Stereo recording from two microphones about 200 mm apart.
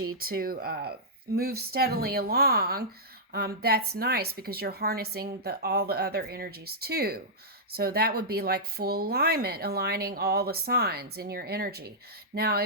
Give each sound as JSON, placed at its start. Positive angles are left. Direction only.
{"t": 0.2, "sound": "speech", "side_deg": -45}